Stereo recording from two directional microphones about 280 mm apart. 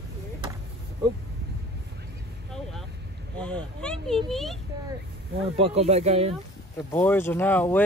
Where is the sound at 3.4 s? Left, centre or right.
Centre.